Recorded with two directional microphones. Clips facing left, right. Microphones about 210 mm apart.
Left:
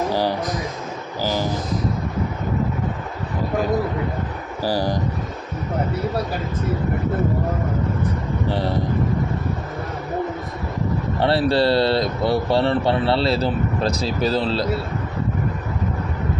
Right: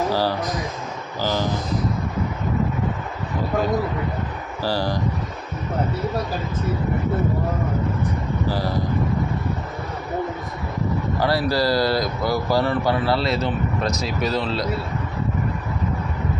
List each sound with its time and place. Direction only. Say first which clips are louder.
0.1 s a sound: left 1 dB; 15° left (ahead or behind)
1.2 s speech: even; 10° left (ahead or behind)
4.6 s speech: left 2 dB; 15° left (ahead or behind)
8.4 s speech: left 2 dB; 25° left (ahead or behind)
11.2 s speech: left 3 dB; 25° left (ahead or behind)